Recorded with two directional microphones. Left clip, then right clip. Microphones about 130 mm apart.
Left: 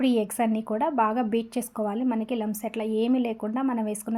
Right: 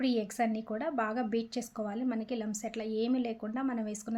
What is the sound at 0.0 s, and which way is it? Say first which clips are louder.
A woman's voice: left 7 dB; 25° left (ahead or behind).